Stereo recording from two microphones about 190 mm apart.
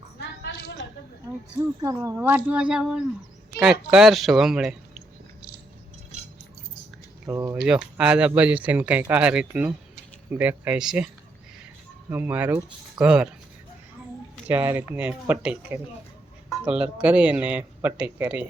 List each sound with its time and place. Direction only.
0.2 s a sound: 65° left (ahead or behind)
1.8 s speech: 15° right (ahead or behind)
7.3 s speech: 15° right (ahead or behind)
7.9 s speech: 5° right (ahead or behind)
14.4 s speech: 10° right (ahead or behind)